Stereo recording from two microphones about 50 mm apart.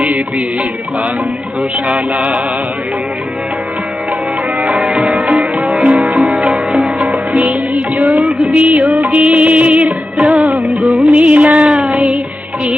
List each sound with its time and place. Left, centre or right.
0.0 s music: right
1.9 s music: right
4.9 s music: centre
5.2 s sitar: right
5.9 s music: right
6.8 s music: centre
7.7 s music: right
8.2 s music: centre
8.4 s music: right
10.3 s music of bollywood: right
11.9 s music: centre